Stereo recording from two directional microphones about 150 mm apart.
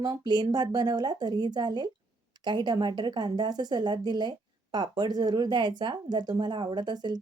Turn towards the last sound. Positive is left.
turn(degrees=-30)  # may be behind; listen again after turning